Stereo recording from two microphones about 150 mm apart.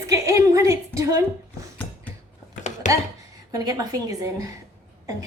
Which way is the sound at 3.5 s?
25° right (ahead or behind).